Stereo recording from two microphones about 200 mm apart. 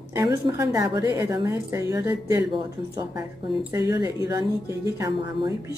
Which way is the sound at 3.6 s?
15° right (ahead or behind).